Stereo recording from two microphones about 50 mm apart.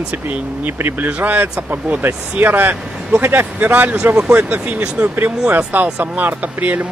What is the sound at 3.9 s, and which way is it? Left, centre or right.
Speech, centre.